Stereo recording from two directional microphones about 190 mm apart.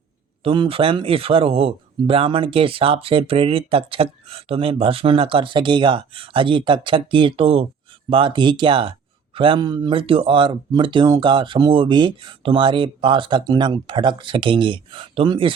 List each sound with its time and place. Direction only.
0.4 s speech: 25° right (ahead or behind)